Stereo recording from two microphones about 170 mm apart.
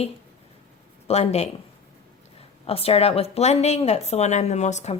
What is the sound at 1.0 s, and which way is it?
Speech, 40° left (ahead or behind).